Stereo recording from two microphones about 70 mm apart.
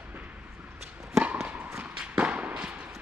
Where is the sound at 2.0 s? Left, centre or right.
Centre.